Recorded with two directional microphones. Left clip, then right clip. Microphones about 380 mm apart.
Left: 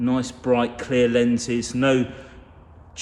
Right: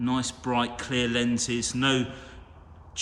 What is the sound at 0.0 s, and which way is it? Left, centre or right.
A man's voice, centre.